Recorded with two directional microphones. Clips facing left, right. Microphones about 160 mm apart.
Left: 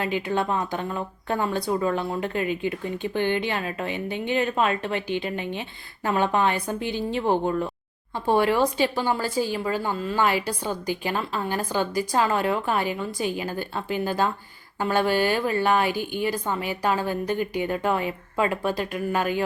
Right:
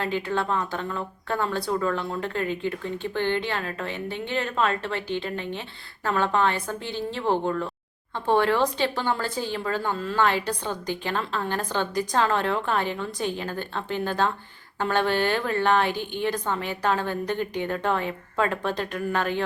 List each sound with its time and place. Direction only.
0.0 s speech: 15° left (ahead or behind)